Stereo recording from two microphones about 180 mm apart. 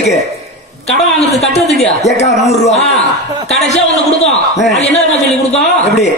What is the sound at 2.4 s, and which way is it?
Speech, 40° left (ahead or behind).